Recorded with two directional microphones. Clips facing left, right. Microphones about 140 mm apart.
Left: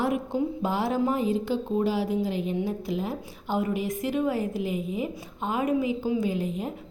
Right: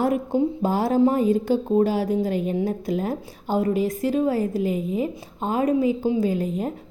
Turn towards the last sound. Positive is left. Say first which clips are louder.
# right 5 dB
turn(degrees=-45)  # may be behind; listen again after turning